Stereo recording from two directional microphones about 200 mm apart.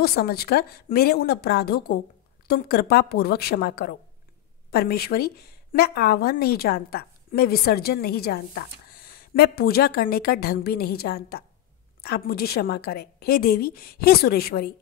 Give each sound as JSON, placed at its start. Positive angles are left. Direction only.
{"t": 0.0, "sound": "a woman's voice", "side_deg": 50}